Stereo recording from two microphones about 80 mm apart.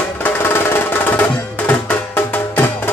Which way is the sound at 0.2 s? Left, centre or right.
Left.